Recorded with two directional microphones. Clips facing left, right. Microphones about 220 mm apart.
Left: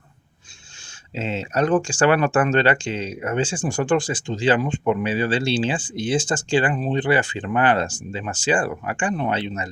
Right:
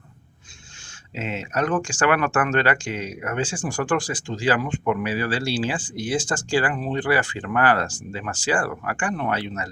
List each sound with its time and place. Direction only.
1.1 s speech: 30° left (ahead or behind)